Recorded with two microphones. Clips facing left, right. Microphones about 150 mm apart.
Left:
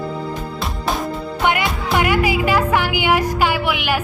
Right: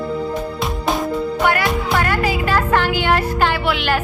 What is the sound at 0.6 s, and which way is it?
Music, centre (ahead or behind).